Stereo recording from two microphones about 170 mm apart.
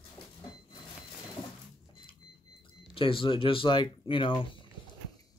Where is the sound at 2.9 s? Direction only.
30° left (ahead or behind).